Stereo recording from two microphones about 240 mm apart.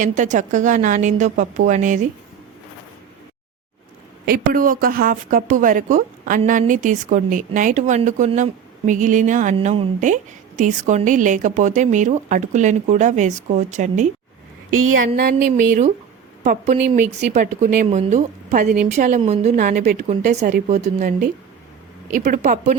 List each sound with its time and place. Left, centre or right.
0.0 s a woman's voice: right
4.3 s a woman's voice: right
14.7 s a woman's voice: right
15.0 s a woman's voice: right
22.1 s a woman's voice: right